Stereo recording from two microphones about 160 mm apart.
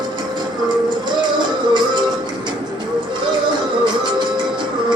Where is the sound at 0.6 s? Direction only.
30° right (ahead or behind).